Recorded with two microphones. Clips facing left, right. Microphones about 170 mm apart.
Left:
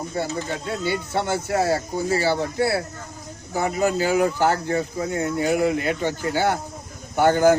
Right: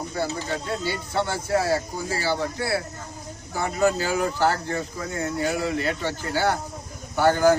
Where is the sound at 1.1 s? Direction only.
25° left (ahead or behind).